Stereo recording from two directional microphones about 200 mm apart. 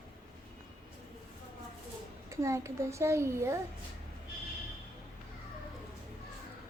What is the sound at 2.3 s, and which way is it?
A child's voice, 15° right (ahead or behind).